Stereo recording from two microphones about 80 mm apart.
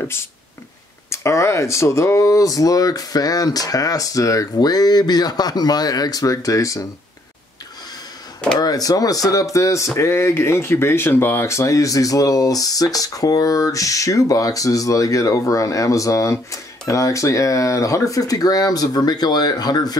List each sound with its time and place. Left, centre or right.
0.0 s speech: left
8.5 s speech: left